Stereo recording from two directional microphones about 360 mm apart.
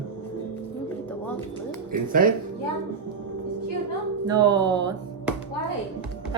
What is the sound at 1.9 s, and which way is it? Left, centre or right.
Speech, right.